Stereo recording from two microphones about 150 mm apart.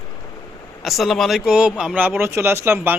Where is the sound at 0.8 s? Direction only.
Centre (ahead or behind).